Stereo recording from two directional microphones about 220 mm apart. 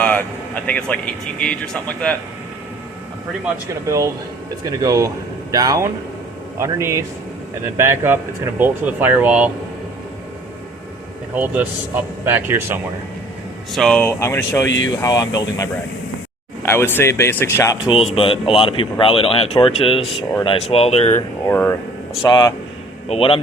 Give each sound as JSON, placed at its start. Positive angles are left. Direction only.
{"t": 0.0, "sound": "speech", "side_deg": 5}
{"t": 3.8, "sound": "speech", "side_deg": -15}
{"t": 11.3, "sound": "speech", "side_deg": -5}
{"t": 13.7, "sound": "speech", "side_deg": 5}
{"t": 17.9, "sound": "speech", "side_deg": 25}
{"t": 21.4, "sound": "speech", "side_deg": 10}
{"t": 22.2, "sound": "speech", "side_deg": 20}